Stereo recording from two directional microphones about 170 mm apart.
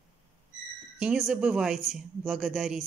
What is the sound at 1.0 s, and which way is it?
Speech, 5° right (ahead or behind).